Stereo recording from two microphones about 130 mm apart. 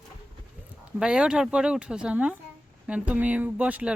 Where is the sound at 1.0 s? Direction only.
5° right (ahead or behind).